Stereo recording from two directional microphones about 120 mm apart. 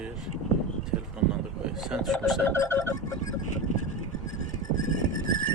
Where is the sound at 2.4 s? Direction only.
20° left (ahead or behind).